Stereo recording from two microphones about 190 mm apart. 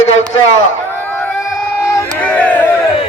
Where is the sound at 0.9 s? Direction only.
10° left (ahead or behind).